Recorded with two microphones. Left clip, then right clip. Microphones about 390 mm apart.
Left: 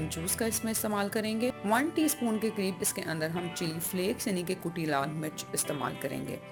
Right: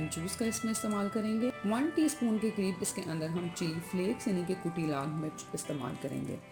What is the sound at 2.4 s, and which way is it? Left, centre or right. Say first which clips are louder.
A woman's voice: left 2 dB; centre.